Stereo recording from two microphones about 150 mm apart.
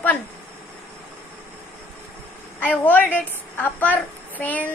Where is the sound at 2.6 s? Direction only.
10° left (ahead or behind).